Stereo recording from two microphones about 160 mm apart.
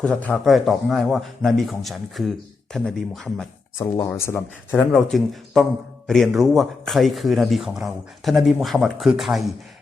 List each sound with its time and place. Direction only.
0.0 s a man's voice: 5° left (ahead or behind)
3.8 s a man's voice: 20° left (ahead or behind); by 9.5 s centre (ahead or behind)